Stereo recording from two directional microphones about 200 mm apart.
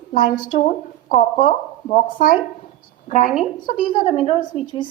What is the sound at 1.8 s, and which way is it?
A woman's voice, 40° left (ahead or behind).